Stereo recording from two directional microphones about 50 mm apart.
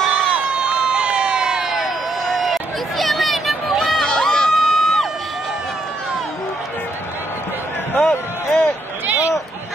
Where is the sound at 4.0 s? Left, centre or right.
Centre.